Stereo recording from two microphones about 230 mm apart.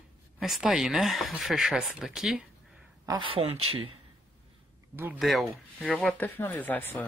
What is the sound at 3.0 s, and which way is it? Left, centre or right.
Speech, right.